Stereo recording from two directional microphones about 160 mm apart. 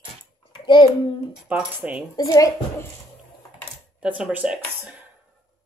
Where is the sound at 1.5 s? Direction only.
10° right (ahead or behind).